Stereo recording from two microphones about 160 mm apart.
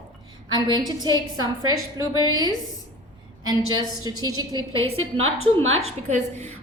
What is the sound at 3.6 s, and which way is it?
Speech, 25° left (ahead or behind).